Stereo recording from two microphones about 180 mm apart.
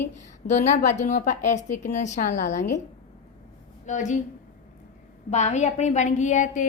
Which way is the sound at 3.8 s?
40° left (ahead or behind).